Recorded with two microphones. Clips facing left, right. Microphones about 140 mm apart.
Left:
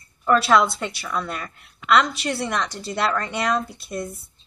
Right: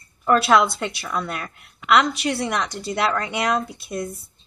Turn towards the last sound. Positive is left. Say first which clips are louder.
# right 1 dB
turn(degrees=-10)  # may be behind; listen again after turning